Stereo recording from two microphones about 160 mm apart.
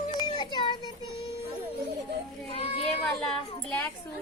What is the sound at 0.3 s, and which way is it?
Child singing, 30° left (ahead or behind).